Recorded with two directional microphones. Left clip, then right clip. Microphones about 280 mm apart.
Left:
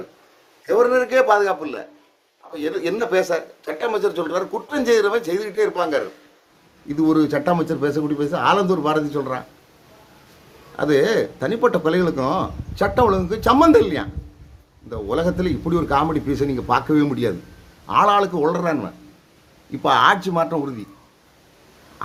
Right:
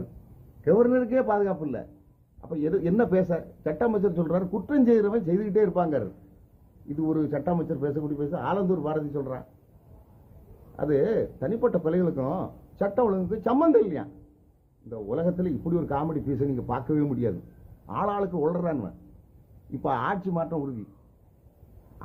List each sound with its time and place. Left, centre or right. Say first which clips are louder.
0.8 s speech: left 10 dB; centre
6.8 s speech: left 10 dB; centre
10.8 s speech: left 7 dB; centre
15.1 s speech: left 7 dB; centre
19.8 s speech: left 12 dB; centre